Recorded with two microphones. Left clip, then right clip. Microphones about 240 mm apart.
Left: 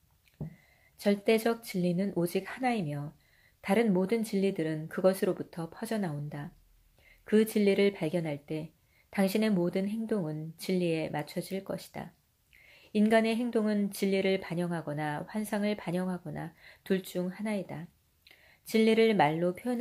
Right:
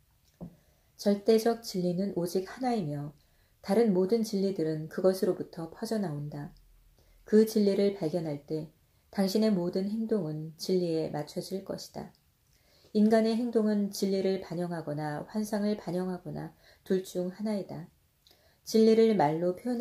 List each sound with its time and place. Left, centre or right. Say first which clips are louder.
0.9 s speech: right 2 dB; left